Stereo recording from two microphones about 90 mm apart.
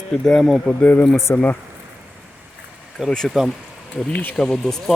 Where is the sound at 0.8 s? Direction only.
15° left (ahead or behind).